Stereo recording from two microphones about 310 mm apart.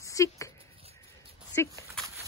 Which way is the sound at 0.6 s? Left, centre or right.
Centre.